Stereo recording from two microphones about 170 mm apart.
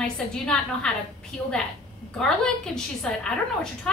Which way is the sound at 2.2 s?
5° left (ahead or behind).